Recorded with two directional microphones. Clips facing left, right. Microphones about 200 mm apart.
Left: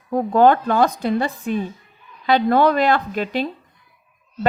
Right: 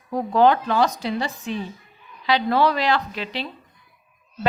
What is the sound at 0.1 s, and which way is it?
Speech, 50° left (ahead or behind).